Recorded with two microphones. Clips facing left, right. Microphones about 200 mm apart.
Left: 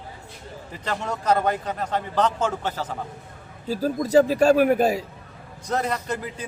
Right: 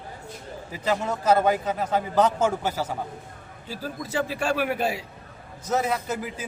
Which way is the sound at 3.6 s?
40° left (ahead or behind).